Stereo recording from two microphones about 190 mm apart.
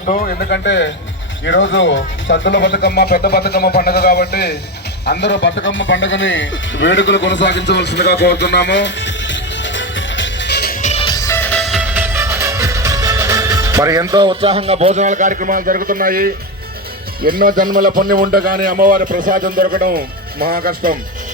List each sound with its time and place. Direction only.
0.0 s speech: 45° left (ahead or behind); by 0.9 s 65° left (ahead or behind)
1.5 s speech: 80° left; by 11.0 s 40° left (ahead or behind)
11.0 s music: 20° left (ahead or behind); by 16.3 s 50° right (ahead or behind)
17.2 s speech: 50° right (ahead or behind)